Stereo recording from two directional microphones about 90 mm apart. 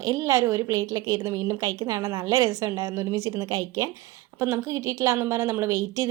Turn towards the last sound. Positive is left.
turn(degrees=-40)  # may be behind; listen again after turning